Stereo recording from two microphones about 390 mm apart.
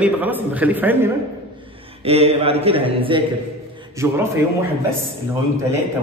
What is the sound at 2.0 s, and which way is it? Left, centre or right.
A man's voice, centre.